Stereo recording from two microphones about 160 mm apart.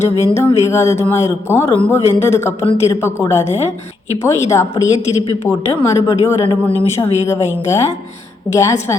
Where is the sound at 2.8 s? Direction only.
20° left (ahead or behind).